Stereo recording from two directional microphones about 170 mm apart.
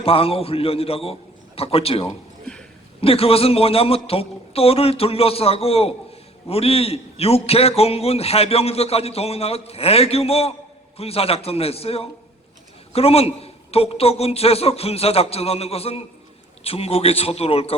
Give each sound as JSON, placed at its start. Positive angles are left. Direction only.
{"t": 0.0, "sound": "a man's voice", "side_deg": 35}